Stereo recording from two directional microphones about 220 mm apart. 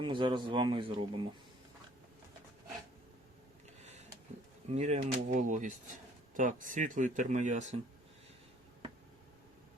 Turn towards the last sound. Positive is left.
turn(degrees=-35)  # may be behind; listen again after turning